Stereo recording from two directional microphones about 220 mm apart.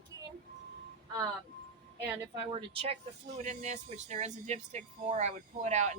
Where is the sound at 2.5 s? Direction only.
25° right (ahead or behind).